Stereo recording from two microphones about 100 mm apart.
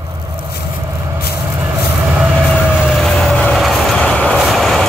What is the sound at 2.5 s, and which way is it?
Vehicle, 5° left (ahead or behind).